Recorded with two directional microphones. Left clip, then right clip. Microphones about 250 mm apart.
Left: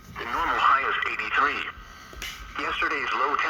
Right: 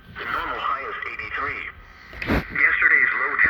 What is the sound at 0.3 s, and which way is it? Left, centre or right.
Radio, left.